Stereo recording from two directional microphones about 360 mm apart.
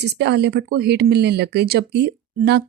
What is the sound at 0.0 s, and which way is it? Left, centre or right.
Speech, right.